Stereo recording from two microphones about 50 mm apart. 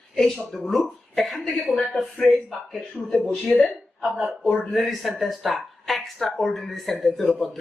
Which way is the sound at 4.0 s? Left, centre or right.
Centre.